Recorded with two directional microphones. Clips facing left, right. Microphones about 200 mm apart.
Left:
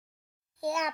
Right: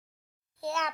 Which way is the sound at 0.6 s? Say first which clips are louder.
Left 2 dB; 15° left (ahead or behind).